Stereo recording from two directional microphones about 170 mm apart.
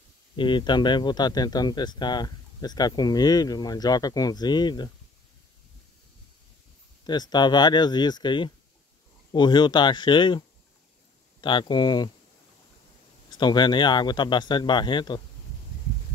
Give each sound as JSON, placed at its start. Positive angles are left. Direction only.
{"t": 0.4, "sound": "speech", "side_deg": 30}
{"t": 7.1, "sound": "speech", "side_deg": 25}
{"t": 11.4, "sound": "speech", "side_deg": 25}
{"t": 13.3, "sound": "speech", "side_deg": 25}